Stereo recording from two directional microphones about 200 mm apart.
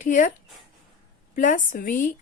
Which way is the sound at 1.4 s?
40° left (ahead or behind).